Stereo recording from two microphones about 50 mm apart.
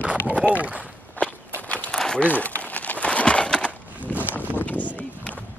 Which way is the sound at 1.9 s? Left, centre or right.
Centre.